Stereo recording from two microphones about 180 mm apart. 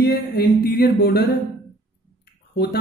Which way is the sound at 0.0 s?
60° left (ahead or behind).